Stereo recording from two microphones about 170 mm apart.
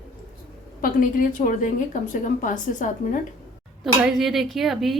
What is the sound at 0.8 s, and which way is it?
A woman's voice, 55° left (ahead or behind).